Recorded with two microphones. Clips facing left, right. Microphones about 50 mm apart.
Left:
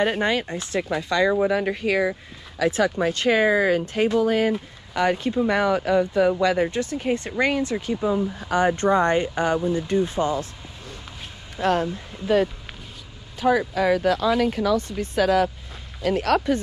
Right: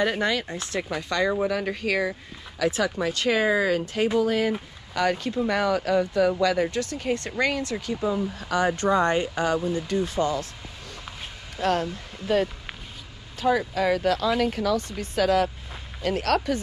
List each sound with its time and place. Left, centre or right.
0.2 s speech: left
1.4 s speech: left
4.5 s speech: left
8.5 s speech: left
13.5 s speech: left
14.8 s speech: left
15.1 s speech: left
16.3 s speech: left